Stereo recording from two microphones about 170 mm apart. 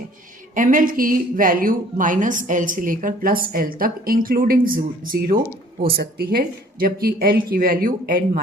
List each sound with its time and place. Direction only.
0.5 s speech: 50° right (ahead or behind)